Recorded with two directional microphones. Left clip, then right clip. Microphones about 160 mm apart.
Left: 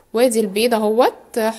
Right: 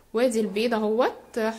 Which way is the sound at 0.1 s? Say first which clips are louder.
Left 7 dB; 25° left (ahead or behind).